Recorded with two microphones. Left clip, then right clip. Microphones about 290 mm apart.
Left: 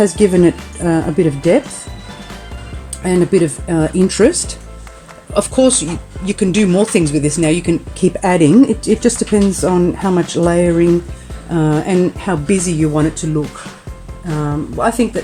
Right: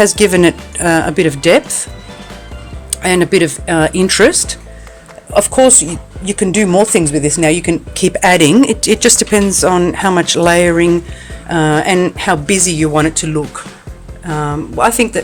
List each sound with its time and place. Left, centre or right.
0.0 s speech: right
2.9 s speech: right
14.4 s speech: right